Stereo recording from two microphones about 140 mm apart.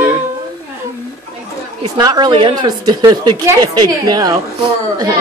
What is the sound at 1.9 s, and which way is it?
A child's voice, 30° right (ahead or behind).